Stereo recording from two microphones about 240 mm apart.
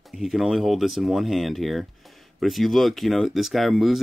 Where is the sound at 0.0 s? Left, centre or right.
Centre.